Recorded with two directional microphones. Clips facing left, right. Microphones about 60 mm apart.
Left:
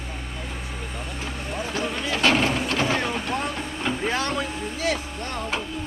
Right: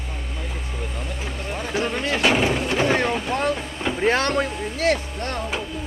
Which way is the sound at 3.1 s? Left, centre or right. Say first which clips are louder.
Right 4 dB; centre.